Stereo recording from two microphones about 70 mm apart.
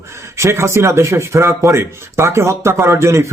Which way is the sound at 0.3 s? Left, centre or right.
Right.